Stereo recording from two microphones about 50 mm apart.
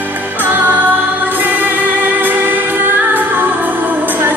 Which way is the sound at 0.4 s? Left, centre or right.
Right.